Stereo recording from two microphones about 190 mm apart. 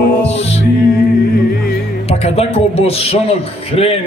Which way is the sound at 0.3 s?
35° left (ahead or behind).